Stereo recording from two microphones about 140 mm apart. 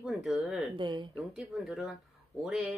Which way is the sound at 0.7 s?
35° right (ahead or behind).